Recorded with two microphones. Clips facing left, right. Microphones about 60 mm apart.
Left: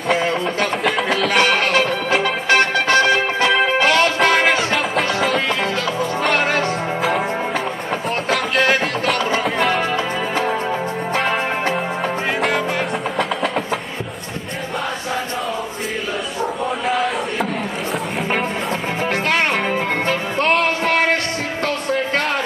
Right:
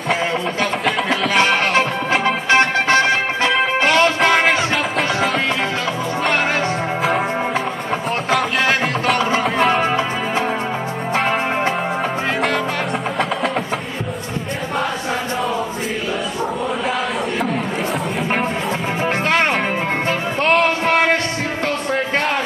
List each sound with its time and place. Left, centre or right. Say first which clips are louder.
0.1 s music: left 1 dB; centre
1.7 s music: even; right
4.4 s music: even; centre
7.0 s music: right 1 dB; centre
8.3 s music: even; centre
9.7 s music: right 2 dB; centre
12.4 s music: even; centre